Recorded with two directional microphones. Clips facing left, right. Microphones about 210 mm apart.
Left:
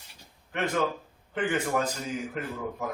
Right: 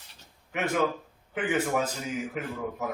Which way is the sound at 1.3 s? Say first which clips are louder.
Even; 5° right (ahead or behind).